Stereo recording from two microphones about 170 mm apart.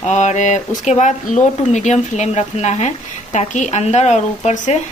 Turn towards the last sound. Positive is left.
turn(degrees=45)  # may be behind; listen again after turning